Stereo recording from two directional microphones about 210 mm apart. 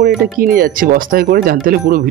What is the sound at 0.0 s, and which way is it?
Speech, 45° right (ahead or behind).